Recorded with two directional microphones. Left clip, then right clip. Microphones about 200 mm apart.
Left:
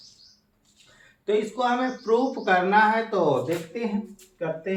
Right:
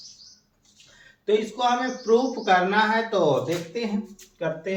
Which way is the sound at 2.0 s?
20° left (ahead or behind).